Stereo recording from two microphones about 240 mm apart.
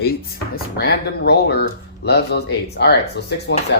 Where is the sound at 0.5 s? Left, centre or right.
Left.